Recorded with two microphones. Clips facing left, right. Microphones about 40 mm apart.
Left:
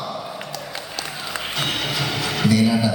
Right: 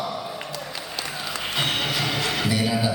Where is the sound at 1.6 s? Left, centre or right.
Centre.